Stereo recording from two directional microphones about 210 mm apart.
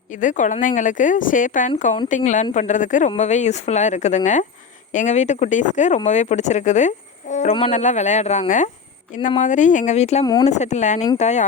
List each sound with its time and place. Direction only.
0.1 s speech: 35° left (ahead or behind)